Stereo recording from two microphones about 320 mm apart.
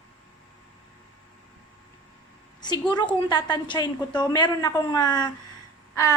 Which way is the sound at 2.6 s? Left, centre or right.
Centre.